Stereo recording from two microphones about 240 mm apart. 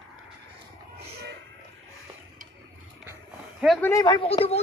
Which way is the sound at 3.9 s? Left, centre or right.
Centre.